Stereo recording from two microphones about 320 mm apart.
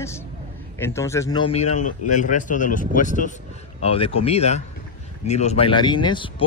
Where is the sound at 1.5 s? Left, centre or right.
Left.